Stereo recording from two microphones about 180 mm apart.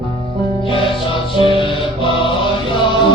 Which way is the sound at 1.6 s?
30° left (ahead or behind).